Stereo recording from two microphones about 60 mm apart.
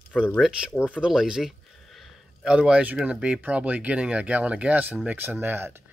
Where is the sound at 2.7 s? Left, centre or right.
Right.